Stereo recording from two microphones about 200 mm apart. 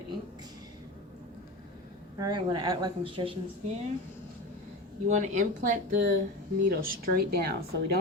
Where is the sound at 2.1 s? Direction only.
20° right (ahead or behind).